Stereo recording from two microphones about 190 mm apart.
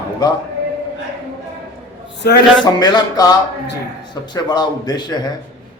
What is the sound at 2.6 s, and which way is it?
Speech, 20° left (ahead or behind).